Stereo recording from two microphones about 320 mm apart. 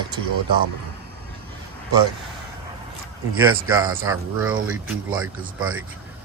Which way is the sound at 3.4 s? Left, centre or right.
Centre.